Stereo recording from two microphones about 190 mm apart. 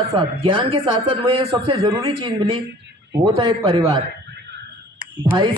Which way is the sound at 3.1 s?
20° right (ahead or behind).